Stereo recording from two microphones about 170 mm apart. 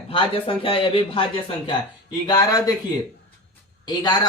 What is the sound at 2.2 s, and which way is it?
Speech, 25° left (ahead or behind).